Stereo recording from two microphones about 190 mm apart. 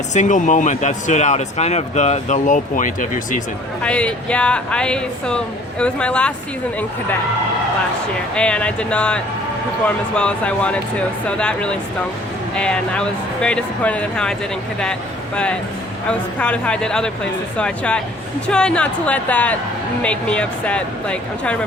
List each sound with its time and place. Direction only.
0.1 s speech: 40° left (ahead or behind)
3.8 s speech: 5° left (ahead or behind)
8.4 s speech: 5° left (ahead or behind)
16.0 s a woman's voice: 5° left (ahead or behind)